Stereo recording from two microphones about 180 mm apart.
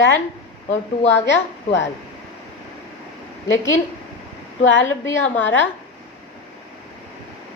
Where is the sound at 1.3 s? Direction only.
85° left.